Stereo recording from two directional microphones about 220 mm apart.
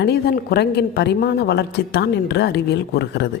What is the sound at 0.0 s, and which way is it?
A woman's voice, 50° left (ahead or behind).